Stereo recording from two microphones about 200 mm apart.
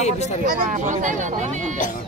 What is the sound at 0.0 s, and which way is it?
Speech, 35° left (ahead or behind).